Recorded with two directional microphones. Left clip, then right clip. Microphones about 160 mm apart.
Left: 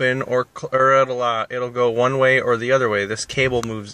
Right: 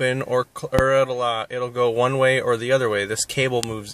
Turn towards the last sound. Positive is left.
turn(degrees=-20)  # may be behind; listen again after turning